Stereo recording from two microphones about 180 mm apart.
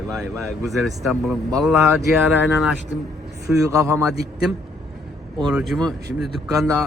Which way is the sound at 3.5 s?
15° right (ahead or behind).